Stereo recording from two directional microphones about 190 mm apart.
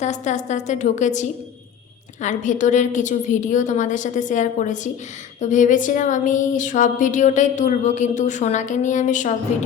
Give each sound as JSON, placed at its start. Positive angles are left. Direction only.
{"t": 0.0, "sound": "a woman's voice", "side_deg": 40}